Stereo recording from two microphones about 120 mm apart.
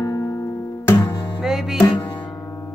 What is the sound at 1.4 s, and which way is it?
Music, 5° right (ahead or behind).